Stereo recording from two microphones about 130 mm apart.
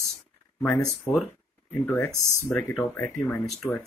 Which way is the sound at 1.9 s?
15° left (ahead or behind).